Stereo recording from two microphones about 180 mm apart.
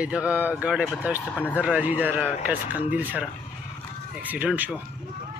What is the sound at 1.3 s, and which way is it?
Speech, 10° left (ahead or behind).